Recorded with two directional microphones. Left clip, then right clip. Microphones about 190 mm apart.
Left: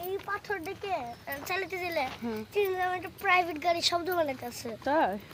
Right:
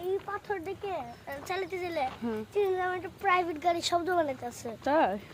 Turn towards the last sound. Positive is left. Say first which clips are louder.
# right 1 dB
turn(degrees=-15)  # may be behind; listen again after turning